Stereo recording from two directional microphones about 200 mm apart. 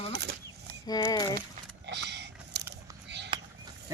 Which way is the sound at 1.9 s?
60° right (ahead or behind).